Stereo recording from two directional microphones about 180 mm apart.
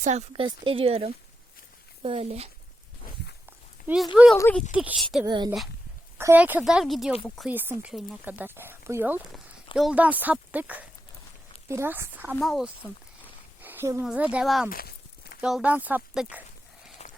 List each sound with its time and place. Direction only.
0.0 s speech: 40° right (ahead or behind)
3.8 s speech: 5° right (ahead or behind)
5.2 s a woman's voice: 25° right (ahead or behind)
6.1 s speech: 10° right (ahead or behind)
7.5 s speech: 10° right (ahead or behind)
12.4 s speech: centre (ahead or behind)
13.6 s a sound: 10° right (ahead or behind)
14.0 s speech: 5° right (ahead or behind)
14.7 s a sound: 55° left (ahead or behind)
15.4 s speech: 5° right (ahead or behind)
17.0 s horse: 45° left (ahead or behind)